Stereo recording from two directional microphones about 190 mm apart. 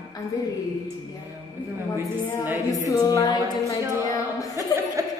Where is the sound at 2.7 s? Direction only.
20° left (ahead or behind).